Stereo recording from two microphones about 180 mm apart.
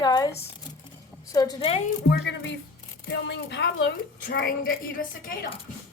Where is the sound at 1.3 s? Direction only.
20° left (ahead or behind).